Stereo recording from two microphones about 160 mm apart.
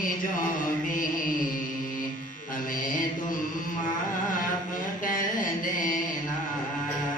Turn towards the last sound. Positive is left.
turn(degrees=55)  # may be behind; listen again after turning